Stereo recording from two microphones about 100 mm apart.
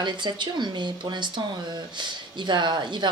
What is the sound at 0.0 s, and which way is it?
Speech, 50° right (ahead or behind).